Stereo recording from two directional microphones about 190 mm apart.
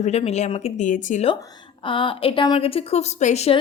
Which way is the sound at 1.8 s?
25° left (ahead or behind).